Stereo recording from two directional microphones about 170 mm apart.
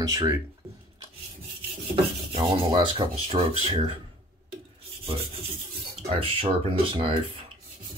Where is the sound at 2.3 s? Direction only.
30° right (ahead or behind).